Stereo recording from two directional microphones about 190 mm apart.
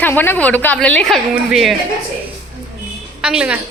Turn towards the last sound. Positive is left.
turn(degrees=-5)  # may be behind; listen again after turning